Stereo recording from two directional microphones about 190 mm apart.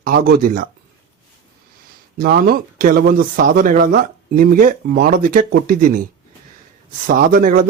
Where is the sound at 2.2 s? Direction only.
50° right (ahead or behind).